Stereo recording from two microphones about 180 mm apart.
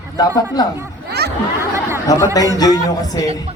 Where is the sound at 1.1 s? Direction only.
65° right (ahead or behind).